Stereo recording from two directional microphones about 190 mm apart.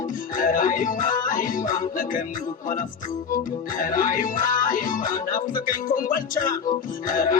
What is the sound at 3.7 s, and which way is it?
Music, 45° left (ahead or behind).